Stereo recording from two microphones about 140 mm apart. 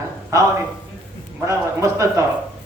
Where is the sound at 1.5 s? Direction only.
20° right (ahead or behind).